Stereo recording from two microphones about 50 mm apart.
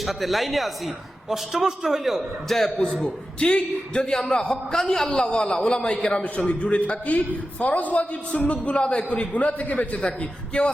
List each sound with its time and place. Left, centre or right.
0.0 s a man's voice: centre
3.4 s a man's voice: left
4.0 s a man's voice: centre